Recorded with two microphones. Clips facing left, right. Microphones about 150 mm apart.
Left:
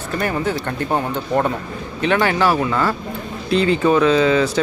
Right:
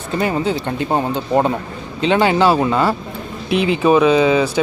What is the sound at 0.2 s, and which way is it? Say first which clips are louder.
Speech: right 3 dB; 20° right (ahead or behind).